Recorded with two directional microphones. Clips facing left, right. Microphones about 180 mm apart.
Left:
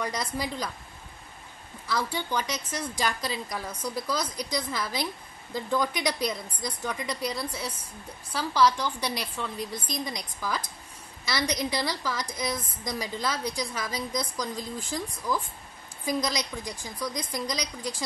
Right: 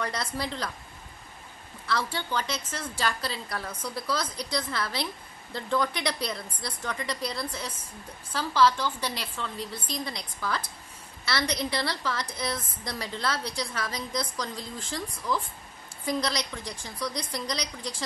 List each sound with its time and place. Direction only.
0.0 s a woman's voice: 10° left (ahead or behind)
1.9 s a woman's voice: 10° left (ahead or behind)